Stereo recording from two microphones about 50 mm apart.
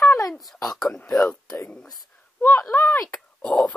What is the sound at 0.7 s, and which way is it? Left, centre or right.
Speech, centre.